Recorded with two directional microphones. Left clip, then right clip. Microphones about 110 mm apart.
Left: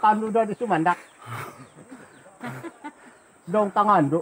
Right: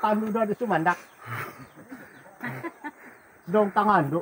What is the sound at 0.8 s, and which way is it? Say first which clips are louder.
Speech: left 2 dB; 25° left (ahead or behind).